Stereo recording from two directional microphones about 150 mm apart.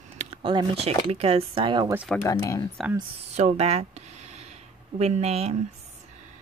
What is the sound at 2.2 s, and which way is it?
Speech, 25° left (ahead or behind).